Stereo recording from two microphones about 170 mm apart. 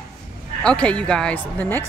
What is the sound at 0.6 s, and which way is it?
Speech, 5° left (ahead or behind).